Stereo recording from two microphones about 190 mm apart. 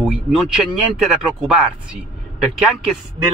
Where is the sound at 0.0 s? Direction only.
Centre (ahead or behind).